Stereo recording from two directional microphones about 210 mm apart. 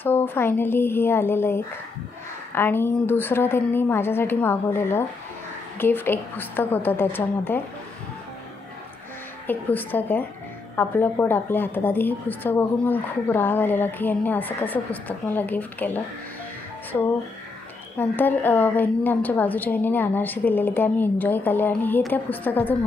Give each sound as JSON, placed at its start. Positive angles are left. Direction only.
{"t": 0.0, "sound": "a woman's voice", "side_deg": 10}
{"t": 9.5, "sound": "a woman's voice", "side_deg": 10}
{"t": 17.9, "sound": "a woman's voice", "side_deg": 10}